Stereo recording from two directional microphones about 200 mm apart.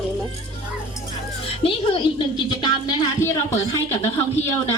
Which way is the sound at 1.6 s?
30° left (ahead or behind).